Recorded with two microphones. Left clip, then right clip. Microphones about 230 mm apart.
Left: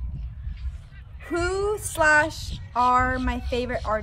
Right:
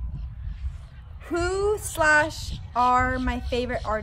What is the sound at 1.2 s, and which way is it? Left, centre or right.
Child singing, centre.